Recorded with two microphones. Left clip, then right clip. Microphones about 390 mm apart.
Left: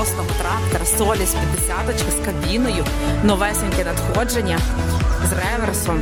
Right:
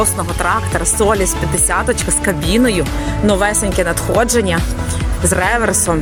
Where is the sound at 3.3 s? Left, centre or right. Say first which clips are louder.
Right 5 dB; left.